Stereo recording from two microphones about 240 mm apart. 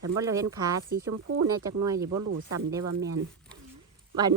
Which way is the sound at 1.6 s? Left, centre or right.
Centre.